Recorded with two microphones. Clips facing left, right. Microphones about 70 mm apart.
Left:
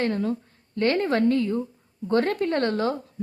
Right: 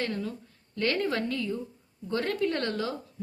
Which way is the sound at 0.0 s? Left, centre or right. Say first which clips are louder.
Left 7 dB; left.